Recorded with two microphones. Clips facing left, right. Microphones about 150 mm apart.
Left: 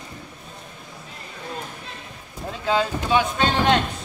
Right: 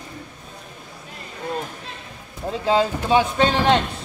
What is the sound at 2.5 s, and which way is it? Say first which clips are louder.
A man's voice: right 3 dB; 30° right (ahead or behind).